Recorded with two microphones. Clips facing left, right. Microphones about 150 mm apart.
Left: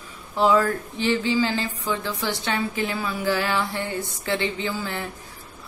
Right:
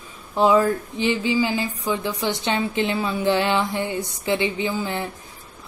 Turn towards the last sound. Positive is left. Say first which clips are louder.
# right 4 dB
turn(degrees=-15)  # may be behind; listen again after turning